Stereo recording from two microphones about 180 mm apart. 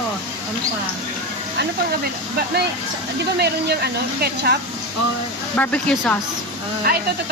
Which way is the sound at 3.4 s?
60° right (ahead or behind).